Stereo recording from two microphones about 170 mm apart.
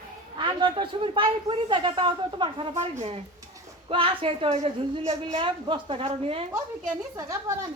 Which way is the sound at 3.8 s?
30° right (ahead or behind).